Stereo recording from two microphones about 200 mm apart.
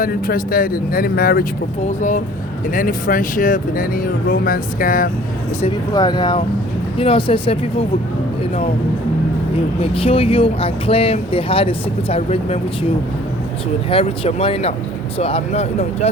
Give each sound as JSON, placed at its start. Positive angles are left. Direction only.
{"t": 0.0, "sound": "speech", "side_deg": 45}
{"t": 5.6, "sound": "speech", "side_deg": 20}
{"t": 9.8, "sound": "speech", "side_deg": 30}
{"t": 13.9, "sound": "speech", "side_deg": 30}